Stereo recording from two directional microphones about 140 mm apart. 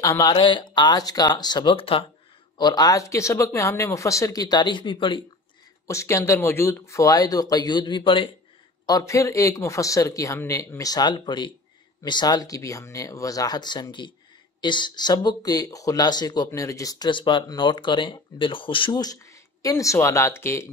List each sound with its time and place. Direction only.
0.0 s speech: 25° left (ahead or behind)
0.4 s speech: 35° left (ahead or behind)
2.5 s speech: 30° left (ahead or behind)
5.9 s speech: 20° left (ahead or behind); by 8.3 s 35° left (ahead or behind)
8.8 s speech: 25° left (ahead or behind)